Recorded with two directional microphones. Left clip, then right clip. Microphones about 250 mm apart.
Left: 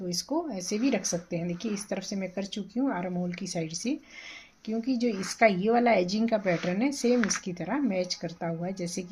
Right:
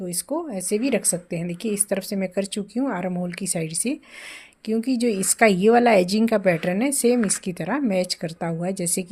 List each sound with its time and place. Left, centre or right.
0.1 s speech: right